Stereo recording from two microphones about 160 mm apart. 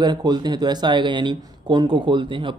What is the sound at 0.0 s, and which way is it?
Speech, 25° right (ahead or behind).